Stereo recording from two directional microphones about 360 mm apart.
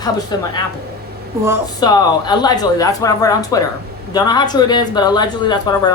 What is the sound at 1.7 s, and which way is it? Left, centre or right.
A woman's voice, centre.